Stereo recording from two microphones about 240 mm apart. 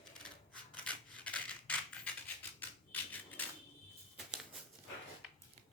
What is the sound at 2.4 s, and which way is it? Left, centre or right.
Typewriter, centre.